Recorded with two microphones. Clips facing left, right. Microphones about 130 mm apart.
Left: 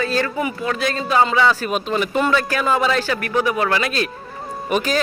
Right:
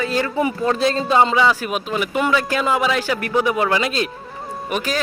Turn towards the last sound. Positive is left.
turn(degrees=0)  # may be behind; listen again after turning